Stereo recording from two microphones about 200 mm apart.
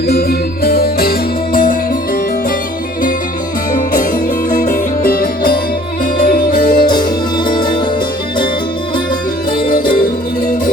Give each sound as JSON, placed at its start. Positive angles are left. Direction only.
{"t": 0.1, "sound": "music", "side_deg": 50}
{"t": 3.7, "sound": "music", "side_deg": 45}
{"t": 6.8, "sound": "music", "side_deg": 20}